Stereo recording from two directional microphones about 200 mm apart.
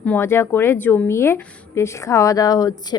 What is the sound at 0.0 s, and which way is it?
A woman's voice, 10° left (ahead or behind).